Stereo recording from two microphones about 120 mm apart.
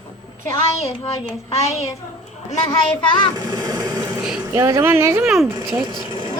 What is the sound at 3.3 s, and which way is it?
Vehicle, 30° right (ahead or behind).